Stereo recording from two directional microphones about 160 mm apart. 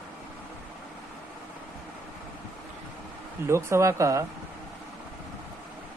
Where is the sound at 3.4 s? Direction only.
15° right (ahead or behind).